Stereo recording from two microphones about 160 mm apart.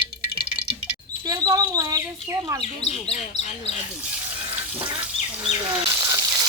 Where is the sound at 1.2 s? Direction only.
25° right (ahead or behind).